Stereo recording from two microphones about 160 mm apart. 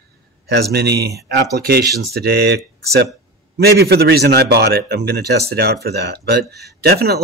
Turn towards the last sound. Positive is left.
turn(degrees=-80)